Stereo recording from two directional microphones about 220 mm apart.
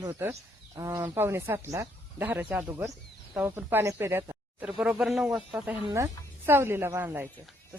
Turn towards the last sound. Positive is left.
turn(degrees=-10)  # may be behind; listen again after turning